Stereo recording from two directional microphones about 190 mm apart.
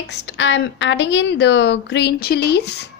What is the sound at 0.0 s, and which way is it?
A woman's voice, 65° left (ahead or behind).